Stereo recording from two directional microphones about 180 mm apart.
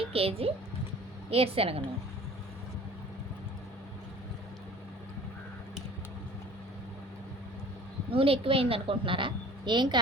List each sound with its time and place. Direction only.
0.0 s a woman's voice: 35° right (ahead or behind)
8.1 s a woman's voice: 30° right (ahead or behind)